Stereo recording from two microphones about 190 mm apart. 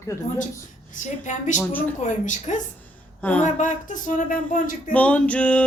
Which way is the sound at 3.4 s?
40° left (ahead or behind).